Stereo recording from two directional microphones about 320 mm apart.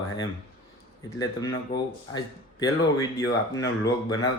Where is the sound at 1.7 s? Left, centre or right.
Left.